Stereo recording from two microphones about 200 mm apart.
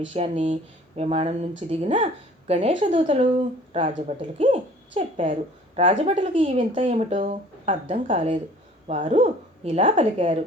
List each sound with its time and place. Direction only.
0.1 s speech: 35° right (ahead or behind)